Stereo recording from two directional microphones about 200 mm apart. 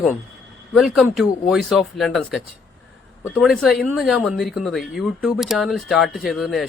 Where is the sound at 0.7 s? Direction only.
Centre (ahead or behind).